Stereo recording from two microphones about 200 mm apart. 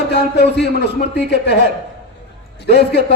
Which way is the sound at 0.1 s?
55° left (ahead or behind).